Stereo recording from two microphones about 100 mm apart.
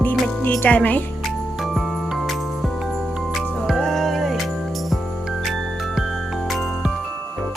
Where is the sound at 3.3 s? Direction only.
5° left (ahead or behind).